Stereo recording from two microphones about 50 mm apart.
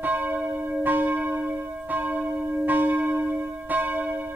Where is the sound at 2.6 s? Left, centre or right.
Right.